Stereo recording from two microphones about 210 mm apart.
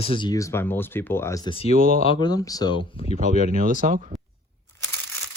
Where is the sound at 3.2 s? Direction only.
30° left (ahead or behind).